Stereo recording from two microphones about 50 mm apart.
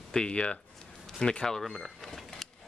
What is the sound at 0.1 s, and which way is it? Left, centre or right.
Speech, centre.